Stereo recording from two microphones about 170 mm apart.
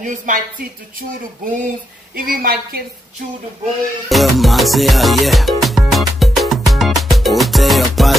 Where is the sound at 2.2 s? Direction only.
60° right (ahead or behind).